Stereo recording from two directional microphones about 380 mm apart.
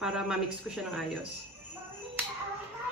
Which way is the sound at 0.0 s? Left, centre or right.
Centre.